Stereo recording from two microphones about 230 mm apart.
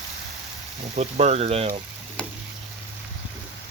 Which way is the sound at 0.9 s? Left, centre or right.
Right.